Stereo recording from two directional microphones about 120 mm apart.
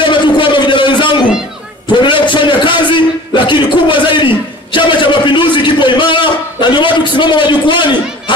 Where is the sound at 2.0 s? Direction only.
45° left (ahead or behind).